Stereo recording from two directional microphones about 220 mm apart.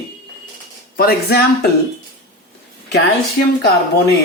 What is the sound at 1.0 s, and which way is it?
Speech, 45° left (ahead or behind).